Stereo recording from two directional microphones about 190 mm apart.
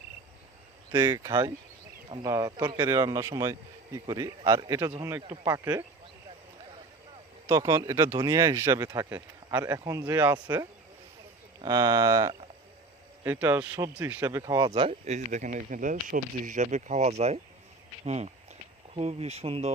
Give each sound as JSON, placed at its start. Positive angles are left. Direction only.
{"t": 0.9, "sound": "speech", "side_deg": -15}
{"t": 7.4, "sound": "speech", "side_deg": -15}
{"t": 10.3, "sound": "speech", "side_deg": -20}
{"t": 14.8, "sound": "speech", "side_deg": -35}